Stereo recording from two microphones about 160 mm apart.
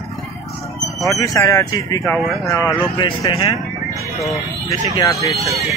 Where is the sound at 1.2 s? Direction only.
20° left (ahead or behind).